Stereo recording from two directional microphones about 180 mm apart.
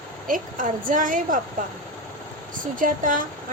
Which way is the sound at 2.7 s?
50° right (ahead or behind).